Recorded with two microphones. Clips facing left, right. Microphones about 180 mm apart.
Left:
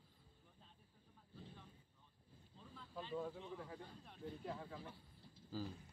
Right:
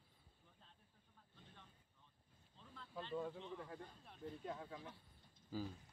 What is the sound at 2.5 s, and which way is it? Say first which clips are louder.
Speech: even; 5° left (ahead or behind).